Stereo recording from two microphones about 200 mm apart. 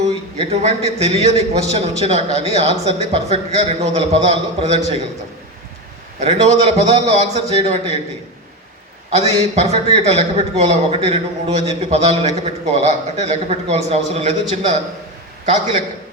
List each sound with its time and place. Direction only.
0.3 s speech: 30° right (ahead or behind)
6.1 s speech: 35° right (ahead or behind)
9.1 s speech: 30° right (ahead or behind)